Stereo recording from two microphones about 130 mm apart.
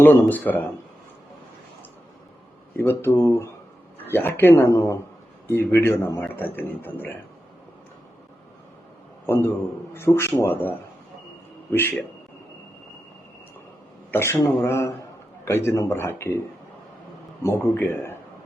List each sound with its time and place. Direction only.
0.0 s a man's voice: 15° left (ahead or behind)
2.7 s a man's voice: 15° left (ahead or behind)
9.2 s a man's voice: 15° left (ahead or behind)
14.1 s a man's voice: 20° left (ahead or behind)
17.4 s a man's voice: 15° left (ahead or behind)